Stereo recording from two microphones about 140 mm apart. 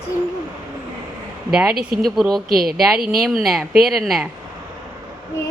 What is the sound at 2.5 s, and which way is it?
Speech, 90° right.